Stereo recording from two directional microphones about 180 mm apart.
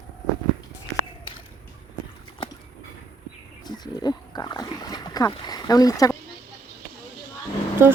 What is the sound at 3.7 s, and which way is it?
Pig, 20° left (ahead or behind).